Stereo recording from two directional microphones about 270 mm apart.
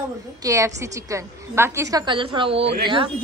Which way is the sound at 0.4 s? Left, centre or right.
Centre.